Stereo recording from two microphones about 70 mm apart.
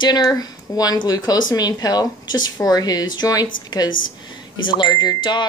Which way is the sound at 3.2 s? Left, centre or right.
Left.